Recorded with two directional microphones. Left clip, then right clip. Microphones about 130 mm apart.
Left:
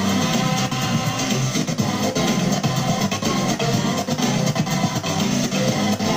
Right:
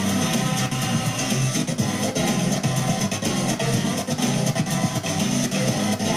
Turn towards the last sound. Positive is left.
turn(degrees=-25)  # may be behind; listen again after turning